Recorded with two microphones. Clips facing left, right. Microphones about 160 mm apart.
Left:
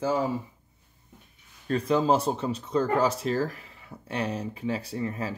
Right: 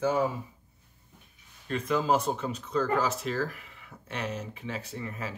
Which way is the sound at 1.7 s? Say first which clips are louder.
Left 3 dB; 30° left (ahead or behind).